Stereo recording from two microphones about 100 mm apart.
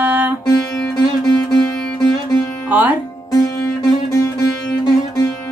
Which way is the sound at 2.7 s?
20° right (ahead or behind).